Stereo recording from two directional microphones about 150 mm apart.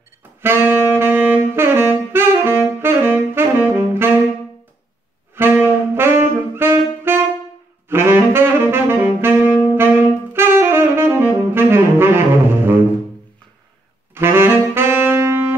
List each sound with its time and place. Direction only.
0.4 s saxophone: 15° right (ahead or behind)
5.3 s saxophone: 15° right (ahead or behind)
14.1 s saxophone: 15° right (ahead or behind)